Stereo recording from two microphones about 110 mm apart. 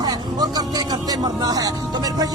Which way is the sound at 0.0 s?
35° right (ahead or behind).